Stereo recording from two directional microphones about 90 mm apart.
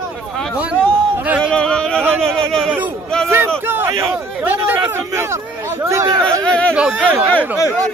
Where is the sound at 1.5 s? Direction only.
10° left (ahead or behind).